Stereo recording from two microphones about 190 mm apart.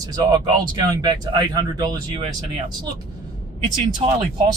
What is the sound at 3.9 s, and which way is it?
Speech, 25° right (ahead or behind).